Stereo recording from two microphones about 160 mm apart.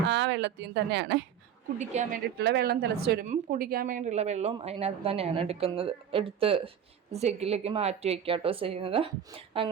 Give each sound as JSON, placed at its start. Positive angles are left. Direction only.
{"t": 0.1, "sound": "speech", "side_deg": -90}
{"t": 1.8, "sound": "speech", "side_deg": -45}
{"t": 2.4, "sound": "a woman's voice", "side_deg": -85}
{"t": 3.2, "sound": "a woman's voice", "side_deg": -65}